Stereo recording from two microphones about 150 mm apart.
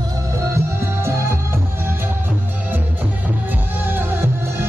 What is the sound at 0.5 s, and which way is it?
Music, 20° right (ahead or behind).